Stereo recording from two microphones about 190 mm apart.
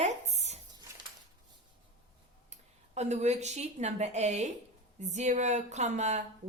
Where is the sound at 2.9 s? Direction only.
35° right (ahead or behind).